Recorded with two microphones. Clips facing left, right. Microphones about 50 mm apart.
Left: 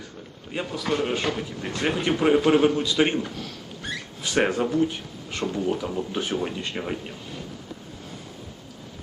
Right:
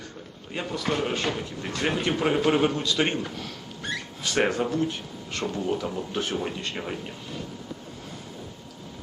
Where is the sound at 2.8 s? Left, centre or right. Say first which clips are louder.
Left 3 dB; centre.